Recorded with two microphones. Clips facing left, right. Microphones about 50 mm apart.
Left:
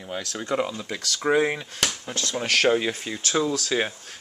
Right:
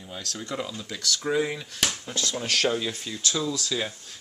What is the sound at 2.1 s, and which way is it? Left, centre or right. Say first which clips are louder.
Speech: left 3 dB; left.